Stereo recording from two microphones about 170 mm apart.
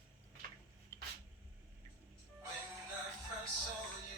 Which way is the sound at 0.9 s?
15° left (ahead or behind).